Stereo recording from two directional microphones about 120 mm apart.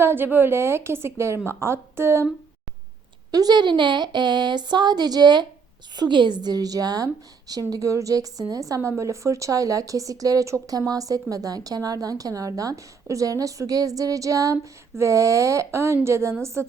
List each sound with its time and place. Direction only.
0.0 s a woman's voice: 15° right (ahead or behind)
3.3 s a woman's voice: 35° right (ahead or behind)